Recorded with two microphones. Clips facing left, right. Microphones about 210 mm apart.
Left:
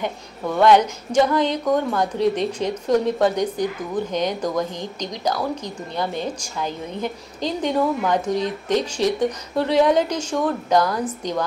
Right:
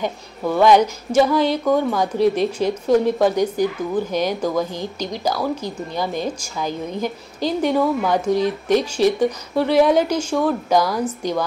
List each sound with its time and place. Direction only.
0.5 s a woman's voice: 10° right (ahead or behind)